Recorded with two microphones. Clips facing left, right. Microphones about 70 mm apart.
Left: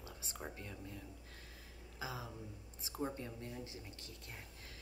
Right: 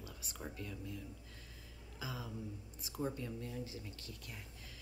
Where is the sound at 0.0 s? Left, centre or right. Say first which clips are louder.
Even; left.